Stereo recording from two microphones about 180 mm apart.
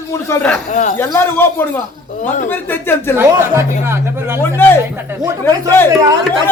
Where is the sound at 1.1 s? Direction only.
10° left (ahead or behind).